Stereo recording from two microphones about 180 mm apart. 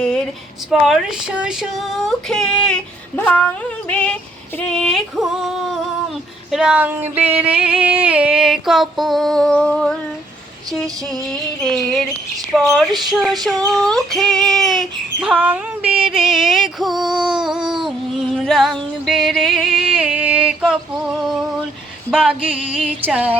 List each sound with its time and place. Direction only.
0.7 s music: 5° right (ahead or behind)